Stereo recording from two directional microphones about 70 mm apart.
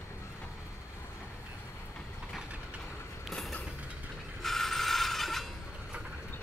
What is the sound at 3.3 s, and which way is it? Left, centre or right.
Train, centre.